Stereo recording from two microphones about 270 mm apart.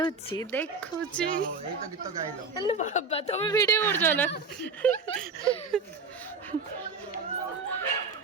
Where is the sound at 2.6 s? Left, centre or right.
Left; by 5.0 s centre.